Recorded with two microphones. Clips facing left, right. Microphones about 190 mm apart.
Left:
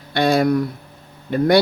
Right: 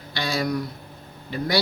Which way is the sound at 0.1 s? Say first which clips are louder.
Left 9 dB; 55° left (ahead or behind).